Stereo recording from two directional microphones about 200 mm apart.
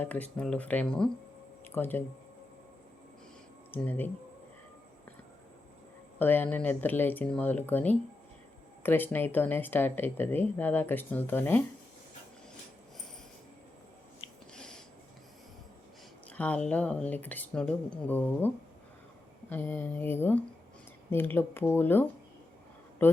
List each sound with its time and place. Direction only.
0.0 s speech: 10° left (ahead or behind)
3.7 s speech: 10° left (ahead or behind)
6.1 s speech: 10° left (ahead or behind)
14.5 s a sound: 5° left (ahead or behind)
16.3 s speech: 5° left (ahead or behind)